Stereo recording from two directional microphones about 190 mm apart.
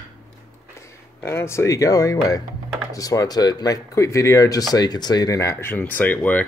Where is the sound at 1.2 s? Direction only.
15° left (ahead or behind).